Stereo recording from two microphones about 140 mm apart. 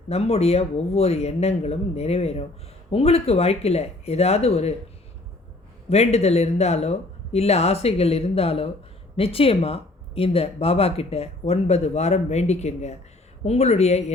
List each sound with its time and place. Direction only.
0.1 s speech: 45° left (ahead or behind)
5.9 s speech: 50° left (ahead or behind)